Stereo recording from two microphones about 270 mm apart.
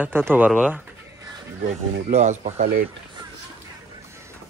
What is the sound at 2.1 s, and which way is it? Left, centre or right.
Speech, right.